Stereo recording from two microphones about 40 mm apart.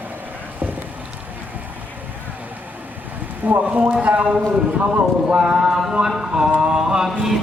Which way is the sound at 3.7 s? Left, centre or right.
Right.